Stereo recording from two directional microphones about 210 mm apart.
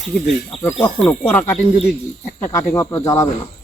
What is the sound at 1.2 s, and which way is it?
Speech, 10° left (ahead or behind).